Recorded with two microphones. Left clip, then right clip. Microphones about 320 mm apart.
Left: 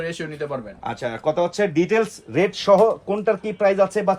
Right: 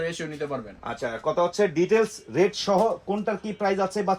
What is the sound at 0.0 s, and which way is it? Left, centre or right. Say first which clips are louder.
Speech: left 2 dB; centre.